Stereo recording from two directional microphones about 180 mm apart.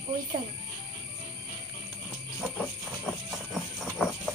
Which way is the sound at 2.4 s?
5° left (ahead or behind).